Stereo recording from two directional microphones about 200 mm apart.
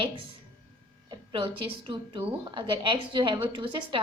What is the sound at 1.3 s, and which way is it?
A woman's voice, 25° right (ahead or behind).